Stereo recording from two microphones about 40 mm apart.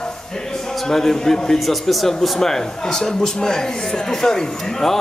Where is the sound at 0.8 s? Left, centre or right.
Centre.